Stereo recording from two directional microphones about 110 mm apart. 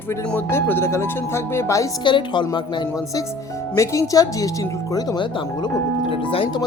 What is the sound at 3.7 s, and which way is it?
Speech, 30° left (ahead or behind).